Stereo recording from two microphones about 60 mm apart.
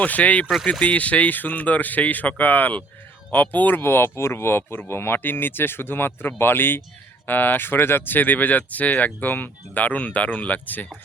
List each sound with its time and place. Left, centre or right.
0.2 s speech: left
3.8 s speech: left